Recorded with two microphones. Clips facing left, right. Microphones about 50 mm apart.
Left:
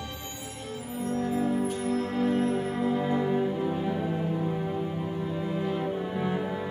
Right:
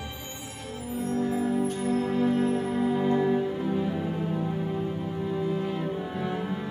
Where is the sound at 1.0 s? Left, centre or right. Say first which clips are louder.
Right 2 dB; left.